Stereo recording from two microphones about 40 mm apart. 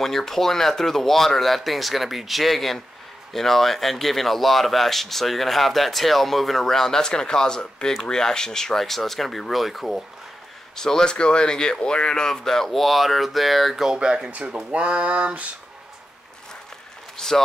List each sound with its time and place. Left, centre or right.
0.0 s speech: centre
10.8 s speech: centre
13.9 s speech: right
14.7 s speech: right
17.2 s a sound: centre